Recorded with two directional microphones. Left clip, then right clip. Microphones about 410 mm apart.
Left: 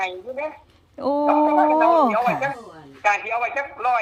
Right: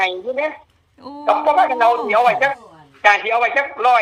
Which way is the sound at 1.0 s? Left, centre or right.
Centre.